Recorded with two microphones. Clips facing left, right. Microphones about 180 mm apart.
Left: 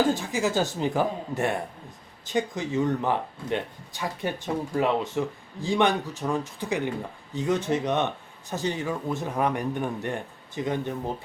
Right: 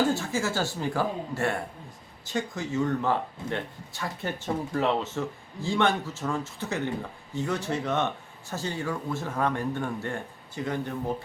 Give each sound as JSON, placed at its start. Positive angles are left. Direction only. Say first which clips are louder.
{"t": 0.1, "sound": "a woman's voice", "louder": "left 2 dB", "side_deg": 15}